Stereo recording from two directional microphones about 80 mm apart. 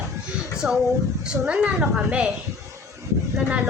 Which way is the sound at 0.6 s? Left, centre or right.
Right.